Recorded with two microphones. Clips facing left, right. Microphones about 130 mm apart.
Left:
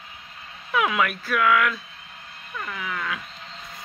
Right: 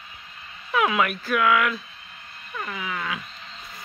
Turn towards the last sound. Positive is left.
turn(degrees=-5)  # may be behind; listen again after turning